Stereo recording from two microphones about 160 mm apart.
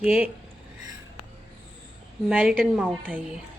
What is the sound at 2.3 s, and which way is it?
Speech, 5° right (ahead or behind).